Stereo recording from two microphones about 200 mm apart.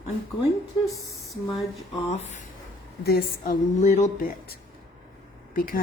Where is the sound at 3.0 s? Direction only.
55° left (ahead or behind).